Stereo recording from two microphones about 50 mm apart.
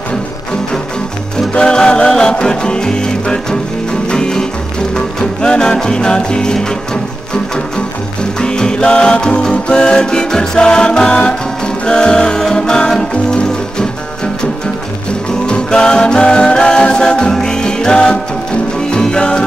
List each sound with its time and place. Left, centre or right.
1.5 s music: centre
8.2 s music: centre
15.4 s music: centre